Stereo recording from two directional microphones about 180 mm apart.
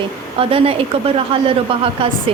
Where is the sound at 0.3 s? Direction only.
30° right (ahead or behind).